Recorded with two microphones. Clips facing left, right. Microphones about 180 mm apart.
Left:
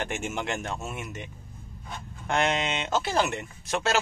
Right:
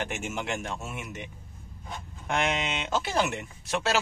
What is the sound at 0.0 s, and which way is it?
Speech, 5° right (ahead or behind).